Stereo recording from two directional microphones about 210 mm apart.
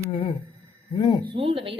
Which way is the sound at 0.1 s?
25° left (ahead or behind).